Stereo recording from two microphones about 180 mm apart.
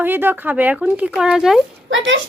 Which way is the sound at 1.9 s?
90° right.